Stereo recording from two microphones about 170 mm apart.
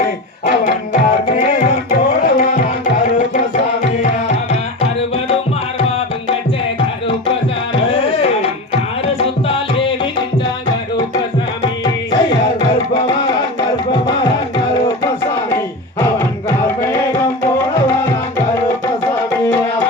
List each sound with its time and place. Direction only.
0.0 s tabla: 55° left (ahead or behind); by 5.4 s 35° left (ahead or behind)
7.9 s tabla: 35° left (ahead or behind)
9.1 s music: 30° left (ahead or behind)